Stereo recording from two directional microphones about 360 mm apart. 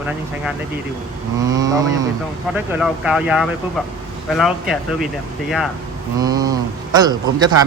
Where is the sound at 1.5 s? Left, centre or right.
Centre.